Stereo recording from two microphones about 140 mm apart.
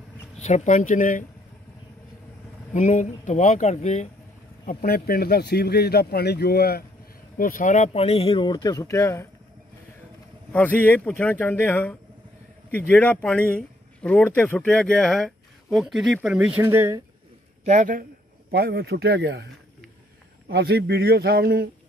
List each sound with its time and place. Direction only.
0.4 s speech: 60° left (ahead or behind)
2.7 s speech: 60° left (ahead or behind)
4.6 s speech: 90° left
7.3 s speech: 75° left (ahead or behind); by 9.3 s 20° left (ahead or behind)
10.5 s a man's voice: 10° left (ahead or behind); by 17.0 s 20° right (ahead or behind)
17.6 s a man's voice: 65° right (ahead or behind)
18.9 s speech: 90° right
20.4 s speech: 90° right